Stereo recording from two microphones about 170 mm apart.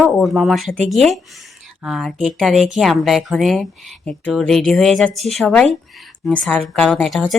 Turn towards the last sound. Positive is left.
turn(degrees=0)  # may be behind; listen again after turning